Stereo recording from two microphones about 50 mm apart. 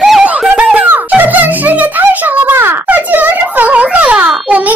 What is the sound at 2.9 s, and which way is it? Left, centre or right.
A child's voice, right.